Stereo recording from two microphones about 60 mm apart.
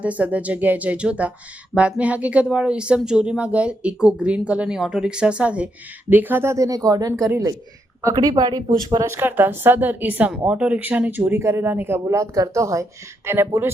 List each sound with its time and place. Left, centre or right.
0.0 s speech: right
6.1 s a woman's voice: right
6.5 s speech: right
9.0 s a woman's voice: right
10.3 s speech: centre; by 11.3 s right
11.3 s speech: right
13.3 s a woman's voice: right